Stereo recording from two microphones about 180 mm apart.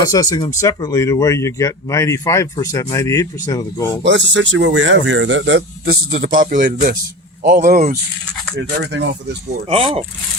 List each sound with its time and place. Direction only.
0.0 s speech: 20° left (ahead or behind)
4.0 s speech: 90° right
6.3 s speech: 50° right (ahead or behind)
8.5 s speech: 70° right (ahead or behind)
9.6 s speech: 30° right (ahead or behind)